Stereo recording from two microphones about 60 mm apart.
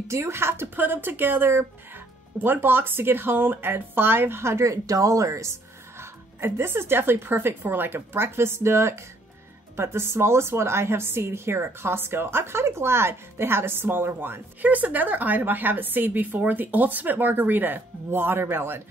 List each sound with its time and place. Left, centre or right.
0.1 s a woman's voice: right
4.8 s speech: right
5.9 s a woman's voice: right
14.7 s a woman's voice: right